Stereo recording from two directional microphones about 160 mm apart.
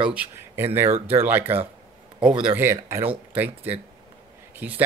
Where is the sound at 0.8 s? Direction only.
40° right (ahead or behind).